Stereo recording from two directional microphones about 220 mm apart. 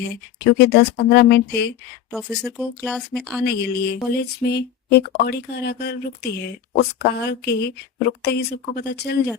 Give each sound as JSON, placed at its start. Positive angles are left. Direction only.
{"t": 0.4, "sound": "speech", "side_deg": 50}
{"t": 2.1, "sound": "speech", "side_deg": 0}
{"t": 3.4, "sound": "speech", "side_deg": 50}